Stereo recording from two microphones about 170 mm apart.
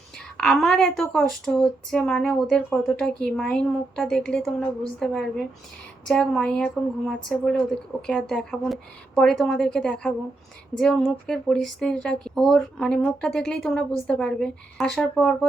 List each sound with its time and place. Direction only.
0.3 s speech: 5° left (ahead or behind)